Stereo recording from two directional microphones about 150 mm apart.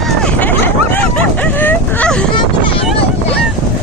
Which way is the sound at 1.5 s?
10° left (ahead or behind).